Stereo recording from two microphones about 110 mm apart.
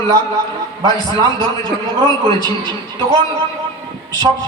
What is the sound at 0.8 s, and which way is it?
Speech, 35° right (ahead or behind).